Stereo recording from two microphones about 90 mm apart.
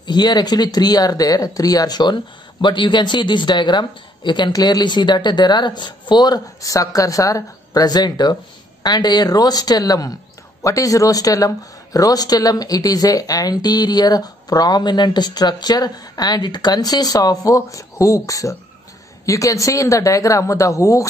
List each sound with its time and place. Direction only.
0.0 s a woman's voice: 50° left (ahead or behind)
4.5 s a woman's voice: 45° left (ahead or behind)